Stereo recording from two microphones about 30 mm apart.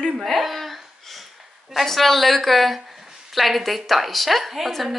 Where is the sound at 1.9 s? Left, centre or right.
Centre.